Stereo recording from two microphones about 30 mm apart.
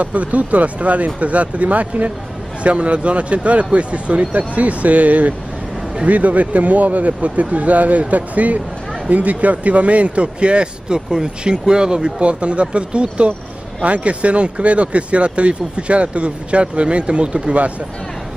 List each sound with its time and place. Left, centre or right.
0.0 s speech: right
2.6 s speech: right
12.2 s speech: right